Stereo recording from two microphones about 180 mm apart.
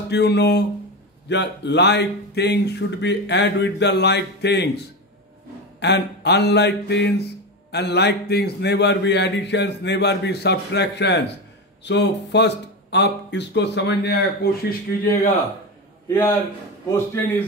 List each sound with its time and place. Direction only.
0.1 s speech: 70° left (ahead or behind)
5.8 s speech: 70° left (ahead or behind); by 15.3 s 55° left (ahead or behind)
16.1 s speech: 15° left (ahead or behind)